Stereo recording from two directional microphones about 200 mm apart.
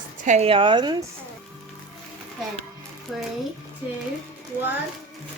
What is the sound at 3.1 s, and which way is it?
Speech, centre (ahead or behind).